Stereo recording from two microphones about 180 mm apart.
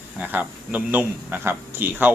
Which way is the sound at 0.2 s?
10° right (ahead or behind).